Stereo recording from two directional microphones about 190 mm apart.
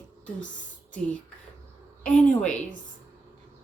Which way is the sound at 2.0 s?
5° left (ahead or behind).